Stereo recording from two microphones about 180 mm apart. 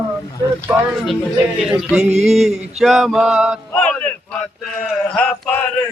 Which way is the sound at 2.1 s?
35° right (ahead or behind).